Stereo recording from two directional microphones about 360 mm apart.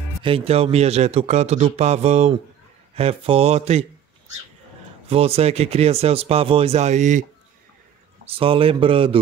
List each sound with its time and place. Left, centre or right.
0.2 s a man's voice: centre
5.1 s a man's voice: centre
8.3 s a man's voice: centre